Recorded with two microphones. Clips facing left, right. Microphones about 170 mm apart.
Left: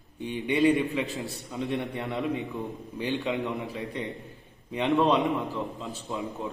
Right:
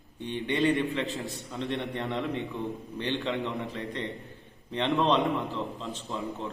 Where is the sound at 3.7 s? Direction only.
10° left (ahead or behind).